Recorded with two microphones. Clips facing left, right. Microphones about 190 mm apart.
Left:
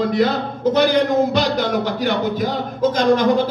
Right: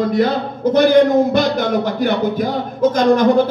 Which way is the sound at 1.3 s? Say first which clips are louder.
Right 3 dB; 50° right (ahead or behind).